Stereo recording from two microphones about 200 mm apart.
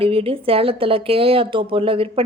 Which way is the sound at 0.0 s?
25° right (ahead or behind).